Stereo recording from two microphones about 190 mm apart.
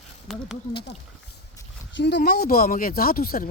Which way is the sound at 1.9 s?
60° left (ahead or behind).